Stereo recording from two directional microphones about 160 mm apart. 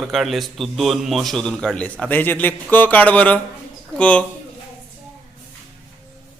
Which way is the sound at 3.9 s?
5° left (ahead or behind).